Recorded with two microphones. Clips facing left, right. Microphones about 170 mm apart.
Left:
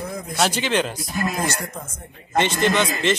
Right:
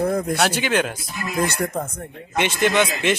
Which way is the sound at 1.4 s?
60° right (ahead or behind).